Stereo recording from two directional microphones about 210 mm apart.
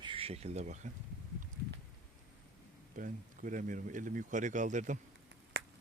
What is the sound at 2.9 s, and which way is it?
Speech, 40° right (ahead or behind).